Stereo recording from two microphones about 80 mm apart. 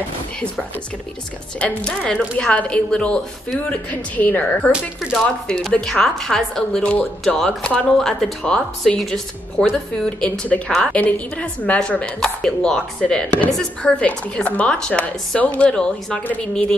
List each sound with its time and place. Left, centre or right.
1.6 s speech: centre
10.0 s speech: centre